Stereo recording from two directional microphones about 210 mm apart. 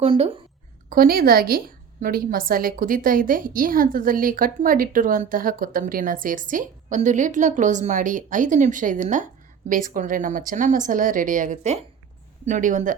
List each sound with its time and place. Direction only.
0.0 s a woman's voice: 25° right (ahead or behind)
0.9 s a woman's voice: 45° right (ahead or behind)